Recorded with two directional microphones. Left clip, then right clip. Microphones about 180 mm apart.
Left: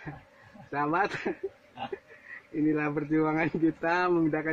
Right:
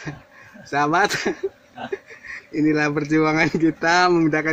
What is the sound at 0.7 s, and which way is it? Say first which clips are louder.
Speech: right 9 dB; 15° right (ahead or behind).